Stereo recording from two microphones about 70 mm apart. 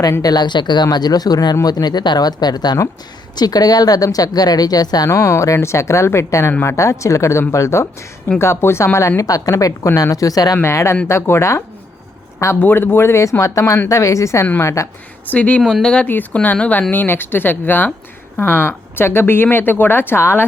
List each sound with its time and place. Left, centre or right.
0.2 s speech: left
5.0 s a woman's voice: left
10.6 s speech: left
12.5 s speech: left
15.3 s speech: left
16.0 s speech: left